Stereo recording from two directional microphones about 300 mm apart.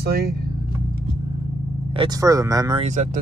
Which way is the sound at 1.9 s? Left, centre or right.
Centre.